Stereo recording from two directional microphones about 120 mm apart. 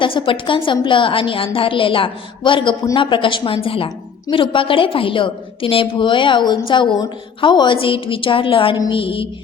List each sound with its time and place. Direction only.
0.0 s a woman's voice: 45° left (ahead or behind)